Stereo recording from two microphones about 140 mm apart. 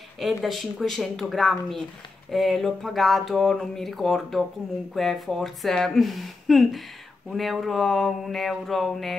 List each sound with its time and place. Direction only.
0.2 s speech: centre (ahead or behind)